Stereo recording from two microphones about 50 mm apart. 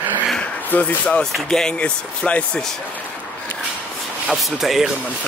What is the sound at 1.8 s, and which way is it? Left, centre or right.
Speech, left.